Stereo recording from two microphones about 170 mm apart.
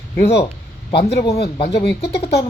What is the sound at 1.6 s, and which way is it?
Speech, 80° left.